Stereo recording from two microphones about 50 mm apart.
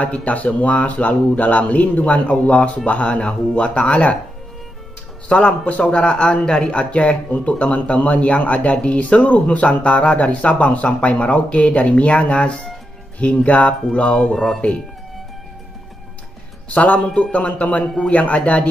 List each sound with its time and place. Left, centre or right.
0.0 s speech: left
5.3 s speech: left
16.6 s speech: left